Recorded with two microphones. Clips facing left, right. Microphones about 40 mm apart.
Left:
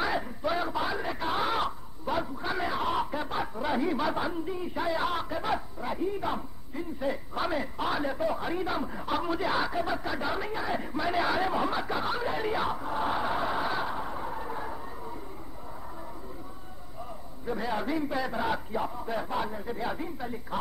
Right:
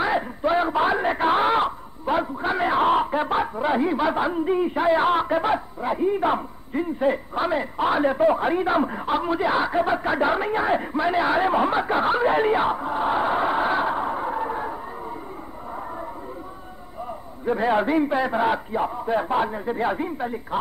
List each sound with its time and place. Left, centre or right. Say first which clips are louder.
0.0 s speech: right 7 dB; right
3.5 s a man's voice: right 7 dB; right
7.3 s a man's voice: right 7 dB; right
9.0 s a man's voice: right 7 dB; right
10.9 s speech: right 7 dB; right
17.5 s a man's voice: right 10 dB; right